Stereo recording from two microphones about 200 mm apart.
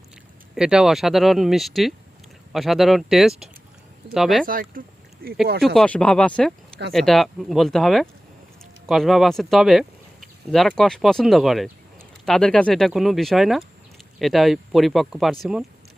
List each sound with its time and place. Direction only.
0.5 s speech: 5° right (ahead or behind)
4.4 s speech: 45° right (ahead or behind)
5.6 s speech: 5° left (ahead or behind)